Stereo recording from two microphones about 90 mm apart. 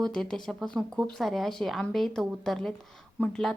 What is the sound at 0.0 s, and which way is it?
Speech, 5° left (ahead or behind).